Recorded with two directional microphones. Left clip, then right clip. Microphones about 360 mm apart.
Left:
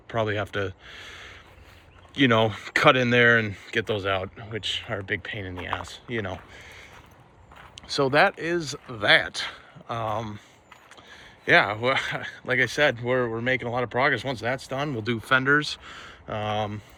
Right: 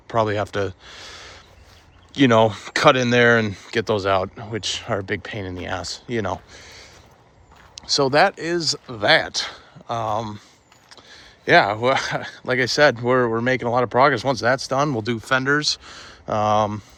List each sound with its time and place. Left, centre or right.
0.1 s speech: centre
2.3 s speech: centre
4.5 s speech: right
5.0 s speech: centre
5.4 s speech: right
6.2 s speech: centre
7.9 s speech: centre
11.4 s speech: centre